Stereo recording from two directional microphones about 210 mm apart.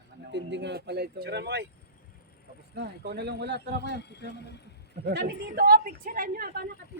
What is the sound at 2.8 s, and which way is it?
Speech, 55° right (ahead or behind).